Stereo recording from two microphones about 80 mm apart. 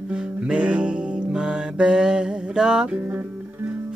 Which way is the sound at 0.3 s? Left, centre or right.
Centre.